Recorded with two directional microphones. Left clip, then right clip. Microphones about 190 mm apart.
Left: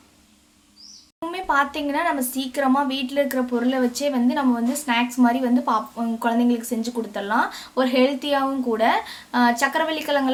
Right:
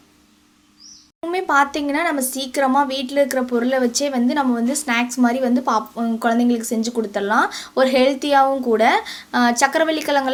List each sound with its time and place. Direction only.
1.3 s a woman's voice: 30° right (ahead or behind)